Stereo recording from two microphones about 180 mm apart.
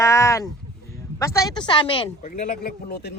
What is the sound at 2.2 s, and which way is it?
Speech, 50° left (ahead or behind).